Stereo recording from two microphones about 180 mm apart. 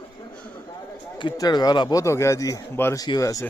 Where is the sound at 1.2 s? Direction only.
20° left (ahead or behind).